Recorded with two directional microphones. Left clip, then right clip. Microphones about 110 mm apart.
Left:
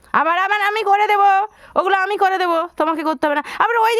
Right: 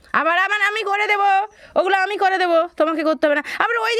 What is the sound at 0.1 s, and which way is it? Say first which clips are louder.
A woman's voice: left 1 dB; 35° left (ahead or behind).